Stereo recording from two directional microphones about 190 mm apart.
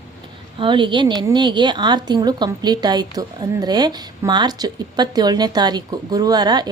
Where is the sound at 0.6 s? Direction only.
25° right (ahead or behind).